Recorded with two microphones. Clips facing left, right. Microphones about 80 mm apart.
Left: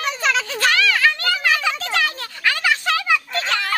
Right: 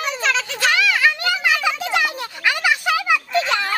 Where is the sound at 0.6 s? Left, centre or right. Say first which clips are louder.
Right 1 dB; centre.